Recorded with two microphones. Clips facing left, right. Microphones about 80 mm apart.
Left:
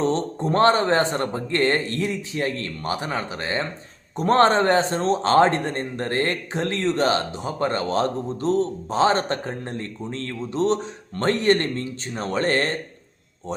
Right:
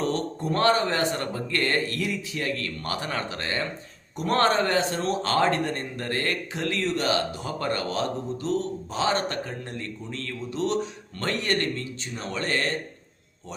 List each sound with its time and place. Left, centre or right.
0.0 s a man's voice: left